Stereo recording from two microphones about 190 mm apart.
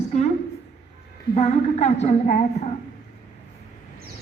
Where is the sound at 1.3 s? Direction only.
35° left (ahead or behind).